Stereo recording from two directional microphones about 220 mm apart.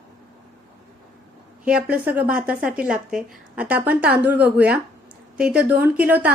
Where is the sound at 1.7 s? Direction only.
5° right (ahead or behind).